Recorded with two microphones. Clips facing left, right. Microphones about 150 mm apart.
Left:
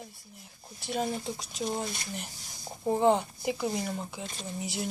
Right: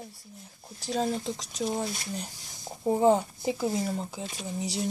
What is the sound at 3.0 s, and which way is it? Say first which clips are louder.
Speech: right 2 dB; 45° right (ahead or behind).